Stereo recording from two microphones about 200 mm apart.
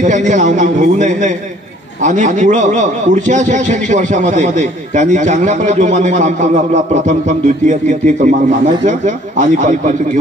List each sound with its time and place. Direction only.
0.0 s a man's voice: 40° right (ahead or behind)